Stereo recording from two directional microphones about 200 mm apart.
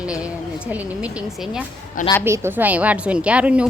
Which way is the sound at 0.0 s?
5° right (ahead or behind).